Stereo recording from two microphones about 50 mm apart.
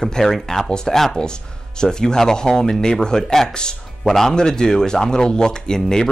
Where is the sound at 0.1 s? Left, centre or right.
Centre.